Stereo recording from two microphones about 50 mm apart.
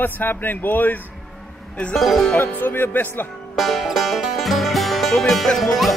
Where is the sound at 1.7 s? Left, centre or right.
Centre.